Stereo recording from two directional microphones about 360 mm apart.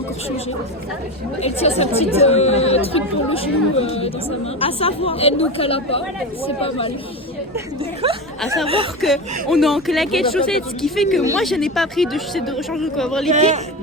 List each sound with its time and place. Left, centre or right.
1.4 s speech: centre
8.0 s speech: centre
8.4 s speech: centre
8.6 s speech: centre
9.0 s speech: centre
13.3 s a man's voice: centre